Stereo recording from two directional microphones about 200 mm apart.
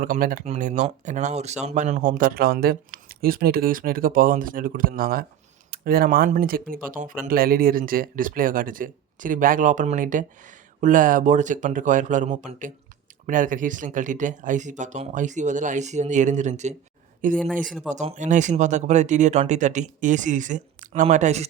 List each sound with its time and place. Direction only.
0.0 s speech: 45° right (ahead or behind)